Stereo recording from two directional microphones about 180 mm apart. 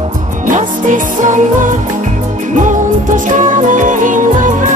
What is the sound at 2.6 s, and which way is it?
Music, 45° right (ahead or behind).